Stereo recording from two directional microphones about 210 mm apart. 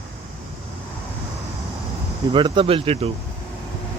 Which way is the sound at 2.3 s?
25° right (ahead or behind).